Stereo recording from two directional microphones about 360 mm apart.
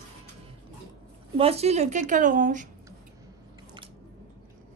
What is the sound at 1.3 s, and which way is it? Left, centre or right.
A woman's voice, centre.